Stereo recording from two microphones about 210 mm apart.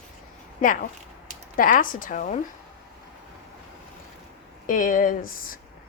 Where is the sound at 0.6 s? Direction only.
40° left (ahead or behind).